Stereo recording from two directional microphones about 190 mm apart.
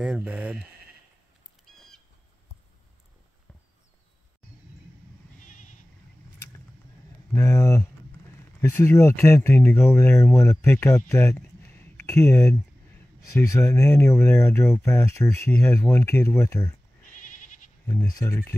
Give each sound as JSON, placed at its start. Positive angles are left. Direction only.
{"t": 0.0, "sound": "speech", "side_deg": -5}
{"t": 7.3, "sound": "speech", "side_deg": 15}
{"t": 17.8, "sound": "speech", "side_deg": 15}